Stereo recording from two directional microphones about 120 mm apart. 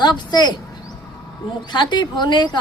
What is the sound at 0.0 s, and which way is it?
Speech, 35° left (ahead or behind).